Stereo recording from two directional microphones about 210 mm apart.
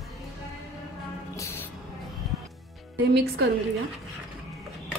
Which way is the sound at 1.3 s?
10° left (ahead or behind).